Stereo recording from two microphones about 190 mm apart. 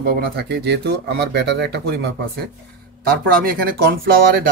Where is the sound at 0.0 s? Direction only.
55° right (ahead or behind).